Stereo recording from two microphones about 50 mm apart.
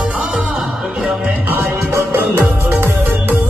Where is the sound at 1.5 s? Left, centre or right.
Right.